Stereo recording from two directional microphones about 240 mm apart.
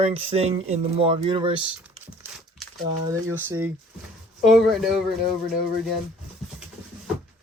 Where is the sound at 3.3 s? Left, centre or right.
Centre.